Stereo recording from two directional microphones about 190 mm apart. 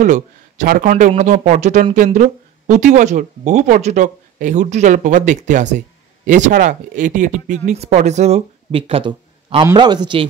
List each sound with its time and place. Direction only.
0.0 s a man's voice: 45° right (ahead or behind); by 10.2 s 25° right (ahead or behind)